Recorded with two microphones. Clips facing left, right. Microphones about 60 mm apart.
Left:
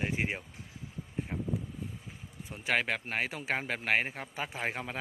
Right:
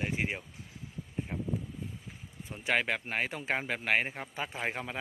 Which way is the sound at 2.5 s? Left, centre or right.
Centre.